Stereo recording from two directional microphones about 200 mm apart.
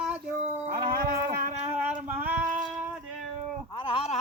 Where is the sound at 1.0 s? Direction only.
45° right (ahead or behind).